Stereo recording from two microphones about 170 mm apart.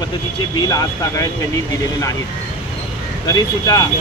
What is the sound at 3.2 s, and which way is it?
Speech, 25° left (ahead or behind).